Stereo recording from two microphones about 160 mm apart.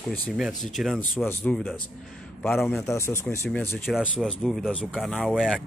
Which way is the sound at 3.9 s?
Centre (ahead or behind).